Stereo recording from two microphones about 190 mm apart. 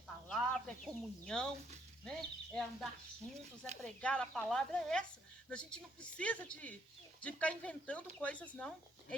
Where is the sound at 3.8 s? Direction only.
5° left (ahead or behind).